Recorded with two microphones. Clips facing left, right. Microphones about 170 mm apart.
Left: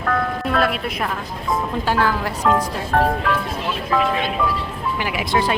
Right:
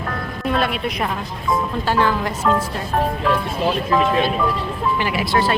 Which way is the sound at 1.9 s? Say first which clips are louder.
Right 1 dB; 10° left (ahead or behind).